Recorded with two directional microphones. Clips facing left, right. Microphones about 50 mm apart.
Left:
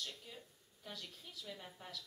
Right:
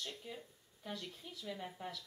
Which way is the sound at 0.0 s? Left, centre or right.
Right.